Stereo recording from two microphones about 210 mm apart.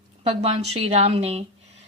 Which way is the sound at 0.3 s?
30° right (ahead or behind).